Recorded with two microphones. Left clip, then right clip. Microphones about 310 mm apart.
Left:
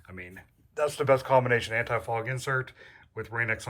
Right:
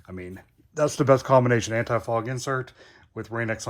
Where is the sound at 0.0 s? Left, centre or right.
Centre.